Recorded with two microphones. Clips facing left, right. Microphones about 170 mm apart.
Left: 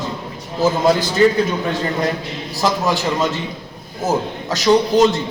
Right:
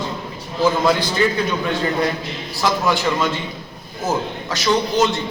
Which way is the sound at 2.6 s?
40° left (ahead or behind).